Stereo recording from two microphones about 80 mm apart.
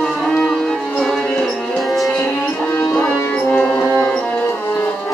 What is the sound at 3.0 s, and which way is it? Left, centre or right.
Music, left.